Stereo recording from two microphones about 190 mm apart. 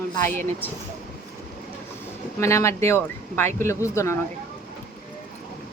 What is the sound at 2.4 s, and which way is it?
Speech, 15° left (ahead or behind).